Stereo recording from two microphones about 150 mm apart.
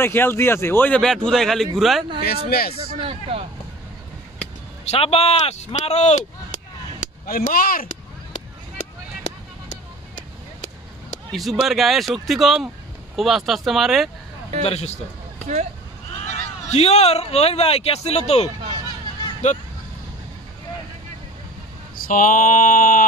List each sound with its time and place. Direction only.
0.0 s a man's voice: 15° left (ahead or behind)
2.2 s speech: 90° left
3.0 s speech: 40° right (ahead or behind)
4.8 s speech: 40° left (ahead or behind); by 7.8 s 70° left (ahead or behind)
11.3 s a man's voice: centre (ahead or behind)
14.6 s speech: 45° left (ahead or behind)
16.6 s speech: 45° left (ahead or behind)
22.0 s mantra: 65° left (ahead or behind)